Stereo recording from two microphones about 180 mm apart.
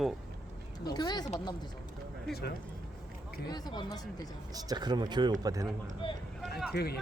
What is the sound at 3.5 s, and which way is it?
Speech, 25° left (ahead or behind).